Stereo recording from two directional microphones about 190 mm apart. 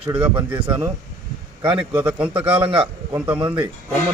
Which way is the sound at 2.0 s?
5° right (ahead or behind).